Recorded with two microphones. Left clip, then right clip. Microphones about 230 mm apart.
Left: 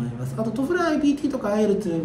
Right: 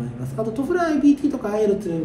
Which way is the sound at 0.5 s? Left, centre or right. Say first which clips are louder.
Right 1 dB; centre.